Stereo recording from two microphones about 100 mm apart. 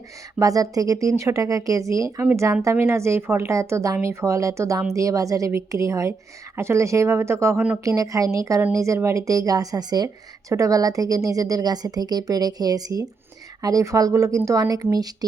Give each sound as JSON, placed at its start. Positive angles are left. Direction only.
{"t": 0.3, "sound": "a woman's voice", "side_deg": -35}